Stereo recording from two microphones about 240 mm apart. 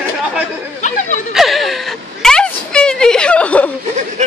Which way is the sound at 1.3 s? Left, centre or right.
Centre.